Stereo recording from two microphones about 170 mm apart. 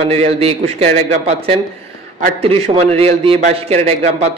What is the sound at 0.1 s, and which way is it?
A man's voice, 35° right (ahead or behind).